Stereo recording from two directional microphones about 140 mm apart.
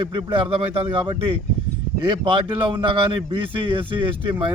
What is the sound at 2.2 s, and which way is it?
Speech, 40° right (ahead or behind).